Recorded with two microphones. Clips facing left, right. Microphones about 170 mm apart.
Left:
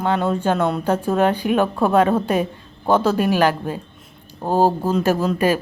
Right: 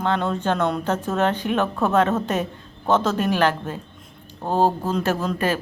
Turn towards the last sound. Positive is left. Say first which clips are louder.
# left 5 dB
turn(degrees=10)  # may be behind; listen again after turning